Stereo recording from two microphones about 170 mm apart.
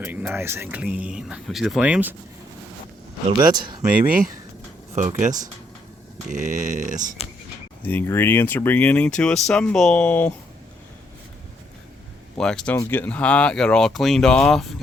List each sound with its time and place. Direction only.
0.0 s speech: 5° right (ahead or behind)
3.5 s speech: 25° right (ahead or behind)
4.9 s speech: 45° right (ahead or behind)
6.3 s speech: 50° right (ahead or behind)
7.9 s speech: 10° left (ahead or behind)
12.4 s speech: 5° left (ahead or behind)